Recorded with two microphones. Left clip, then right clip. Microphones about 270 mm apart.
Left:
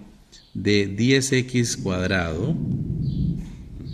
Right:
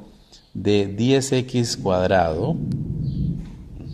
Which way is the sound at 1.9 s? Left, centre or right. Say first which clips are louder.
Right 9 dB; right.